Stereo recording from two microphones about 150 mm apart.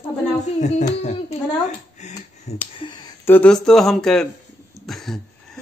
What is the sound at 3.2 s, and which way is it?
Speech, 10° left (ahead or behind).